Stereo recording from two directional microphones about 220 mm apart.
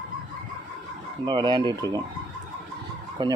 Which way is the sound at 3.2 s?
20° right (ahead or behind).